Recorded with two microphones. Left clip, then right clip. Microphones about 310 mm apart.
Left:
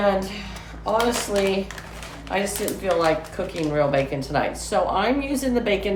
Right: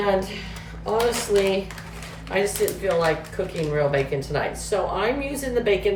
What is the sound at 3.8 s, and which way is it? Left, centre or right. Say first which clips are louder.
A woman's voice: left 1 dB; centre.